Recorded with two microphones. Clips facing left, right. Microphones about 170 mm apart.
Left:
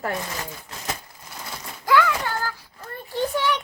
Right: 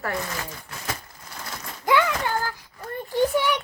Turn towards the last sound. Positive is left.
turn(degrees=-10)  # may be behind; listen again after turning